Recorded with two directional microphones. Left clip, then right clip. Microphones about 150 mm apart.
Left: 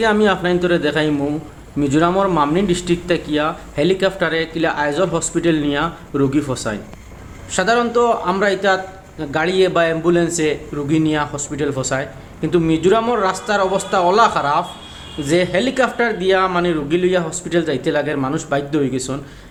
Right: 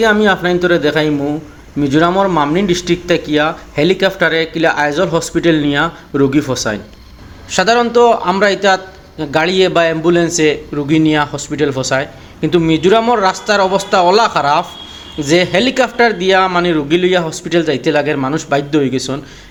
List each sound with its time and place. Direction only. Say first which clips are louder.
0.0 s a man's voice: right 4 dB; 15° right (ahead or behind)